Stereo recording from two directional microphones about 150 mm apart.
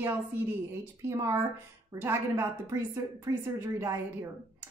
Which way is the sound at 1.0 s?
20° right (ahead or behind).